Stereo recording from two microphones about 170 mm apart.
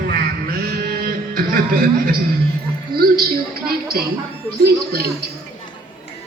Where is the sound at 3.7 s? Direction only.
65° right (ahead or behind).